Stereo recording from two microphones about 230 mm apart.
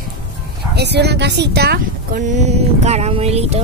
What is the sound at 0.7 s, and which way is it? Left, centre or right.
Speech, right.